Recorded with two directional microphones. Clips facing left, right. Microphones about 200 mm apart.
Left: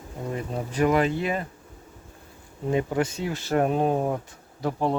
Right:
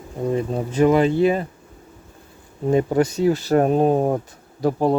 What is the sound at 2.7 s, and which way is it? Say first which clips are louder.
Speech: right 6 dB; 40° right (ahead or behind).